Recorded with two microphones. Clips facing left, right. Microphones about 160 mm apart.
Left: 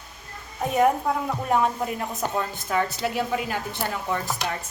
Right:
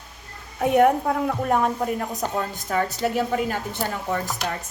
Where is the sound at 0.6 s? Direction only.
65° right (ahead or behind); by 3.6 s 45° right (ahead or behind).